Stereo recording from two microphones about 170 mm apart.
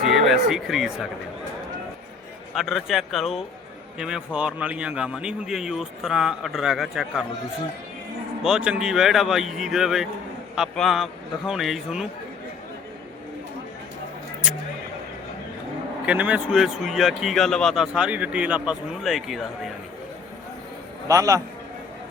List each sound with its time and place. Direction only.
0.5 s speech: centre (ahead or behind)
2.6 s speech: centre (ahead or behind)
8.4 s speech: 5° right (ahead or behind)
16.0 s speech: 10° right (ahead or behind)
21.1 s a man's voice: 20° right (ahead or behind)